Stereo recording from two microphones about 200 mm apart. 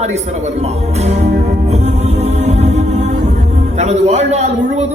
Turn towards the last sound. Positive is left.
turn(degrees=-35)  # may be behind; listen again after turning